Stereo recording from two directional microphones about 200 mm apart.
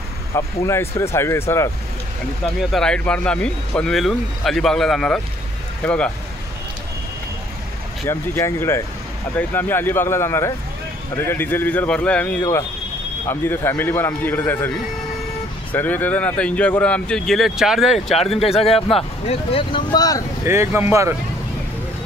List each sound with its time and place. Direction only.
0.3 s a man's voice: 15° left (ahead or behind)
2.4 s speech: centre (ahead or behind)
8.1 s a man's voice: 15° left (ahead or behind)
15.7 s speech: 10° left (ahead or behind)
18.4 s speech: 30° left (ahead or behind)
20.4 s speech: 15° right (ahead or behind)